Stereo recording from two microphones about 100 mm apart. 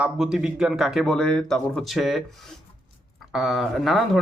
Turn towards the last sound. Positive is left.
turn(degrees=0)  # may be behind; listen again after turning